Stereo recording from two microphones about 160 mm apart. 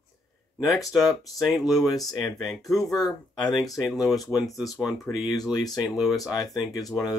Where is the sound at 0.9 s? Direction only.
Centre (ahead or behind).